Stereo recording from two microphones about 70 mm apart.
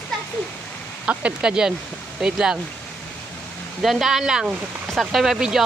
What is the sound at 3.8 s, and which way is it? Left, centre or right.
Speech, centre.